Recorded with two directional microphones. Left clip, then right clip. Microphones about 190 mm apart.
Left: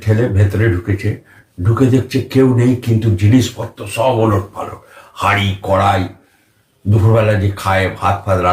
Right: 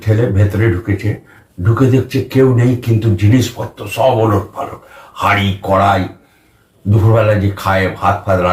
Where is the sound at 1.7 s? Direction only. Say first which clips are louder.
Right 1 dB; 15° left (ahead or behind).